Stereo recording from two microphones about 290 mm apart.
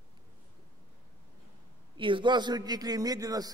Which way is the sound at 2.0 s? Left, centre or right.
Centre.